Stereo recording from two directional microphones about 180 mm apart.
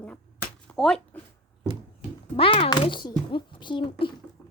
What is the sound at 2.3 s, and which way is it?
A child's voice, 30° left (ahead or behind).